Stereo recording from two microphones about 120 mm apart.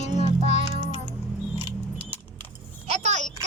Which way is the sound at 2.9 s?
70° right (ahead or behind).